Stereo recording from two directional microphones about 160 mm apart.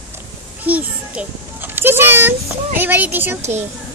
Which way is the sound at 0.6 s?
10° right (ahead or behind).